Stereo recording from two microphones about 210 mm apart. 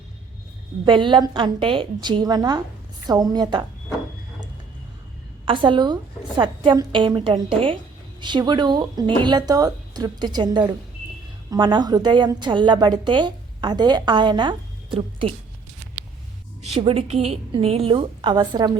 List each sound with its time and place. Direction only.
0.9 s a woman's voice: 25° right (ahead or behind)
5.5 s a woman's voice: 25° right (ahead or behind)
16.6 s a woman's voice: 30° right (ahead or behind)